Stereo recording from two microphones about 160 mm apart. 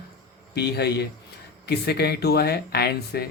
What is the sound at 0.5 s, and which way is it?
Speech, 90° left.